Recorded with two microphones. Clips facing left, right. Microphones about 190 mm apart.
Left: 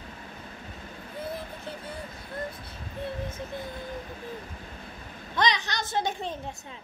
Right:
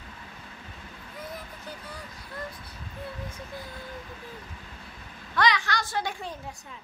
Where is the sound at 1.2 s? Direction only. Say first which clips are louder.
Left 4 dB; 30° left (ahead or behind).